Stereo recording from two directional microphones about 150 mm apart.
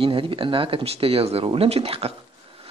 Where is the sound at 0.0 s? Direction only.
35° right (ahead or behind).